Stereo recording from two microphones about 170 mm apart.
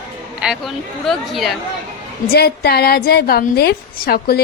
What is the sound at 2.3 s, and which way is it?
A woman's voice, 65° left (ahead or behind).